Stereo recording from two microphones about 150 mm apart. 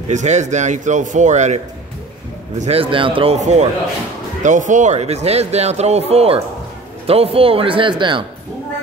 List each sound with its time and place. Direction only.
0.1 s a man's voice: 50° right (ahead or behind)
2.6 s speech: 40° right (ahead or behind)
3.3 s a man's voice: 50° right (ahead or behind); by 8.3 s 35° right (ahead or behind)